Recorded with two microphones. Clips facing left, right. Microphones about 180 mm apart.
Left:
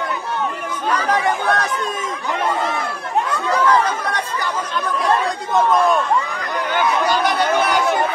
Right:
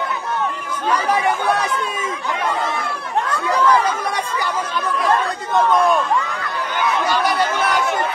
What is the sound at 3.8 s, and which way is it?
Chatter, 10° right (ahead or behind).